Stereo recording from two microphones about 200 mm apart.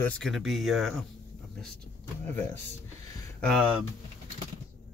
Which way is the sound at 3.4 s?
Centre (ahead or behind).